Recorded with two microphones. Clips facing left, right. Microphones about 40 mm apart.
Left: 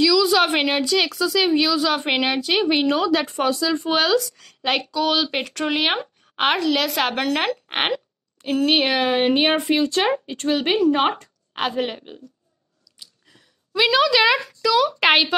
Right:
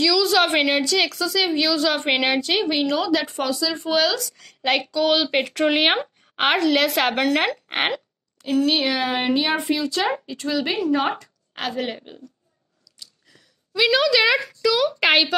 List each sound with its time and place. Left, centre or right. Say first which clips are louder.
0.0 s a woman's voice: left 2 dB; centre
2.7 s speech: left 2 dB; centre
3.0 s speech: left 2 dB; left
3.9 s speech: left 1 dB; left
4.4 s speech: right 1 dB; centre
6.3 s a woman's voice: right 1 dB; centre
8.5 s speech: left 1 dB; left
9.2 s speech: left 3 dB; left
11.5 s speech: left 3 dB; centre
11.9 s speech: right 1 dB; centre
13.7 s a woman's voice: left 1 dB; centre